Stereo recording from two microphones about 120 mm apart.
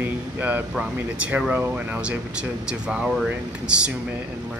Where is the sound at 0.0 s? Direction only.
15° right (ahead or behind).